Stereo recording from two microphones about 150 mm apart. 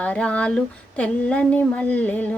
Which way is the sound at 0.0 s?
10° left (ahead or behind).